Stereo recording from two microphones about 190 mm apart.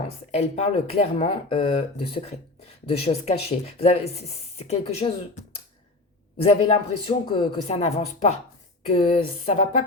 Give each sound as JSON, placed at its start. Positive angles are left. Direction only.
{"t": 0.3, "sound": "speech", "side_deg": 35}
{"t": 6.4, "sound": "speech", "side_deg": 30}